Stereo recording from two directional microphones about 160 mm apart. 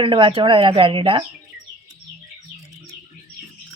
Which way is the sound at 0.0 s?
30° right (ahead or behind).